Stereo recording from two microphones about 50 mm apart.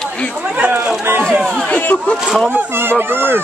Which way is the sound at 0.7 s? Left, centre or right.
Right.